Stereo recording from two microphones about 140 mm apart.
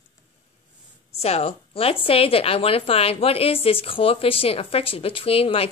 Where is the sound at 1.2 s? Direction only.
45° left (ahead or behind).